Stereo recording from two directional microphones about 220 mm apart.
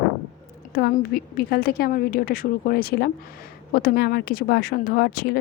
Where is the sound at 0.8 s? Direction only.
45° left (ahead or behind).